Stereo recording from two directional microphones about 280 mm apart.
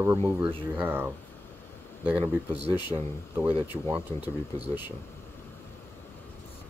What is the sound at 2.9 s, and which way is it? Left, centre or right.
Speech, centre.